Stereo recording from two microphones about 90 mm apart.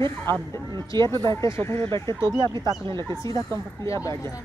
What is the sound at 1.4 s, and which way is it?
Speech, 30° left (ahead or behind).